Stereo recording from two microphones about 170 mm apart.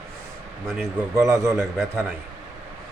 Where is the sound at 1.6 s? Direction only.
Centre (ahead or behind).